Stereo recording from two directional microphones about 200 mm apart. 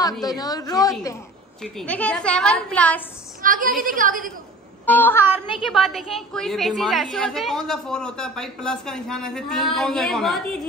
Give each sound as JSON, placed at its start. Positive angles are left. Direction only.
{"t": 0.4, "sound": "a woman's voice", "side_deg": 20}
{"t": 1.6, "sound": "a woman's voice", "side_deg": 5}
{"t": 3.4, "sound": "a woman's voice", "side_deg": -45}
{"t": 4.8, "sound": "a woman's voice", "side_deg": 10}